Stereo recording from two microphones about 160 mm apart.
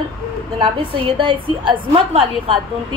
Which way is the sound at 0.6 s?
30° right (ahead or behind).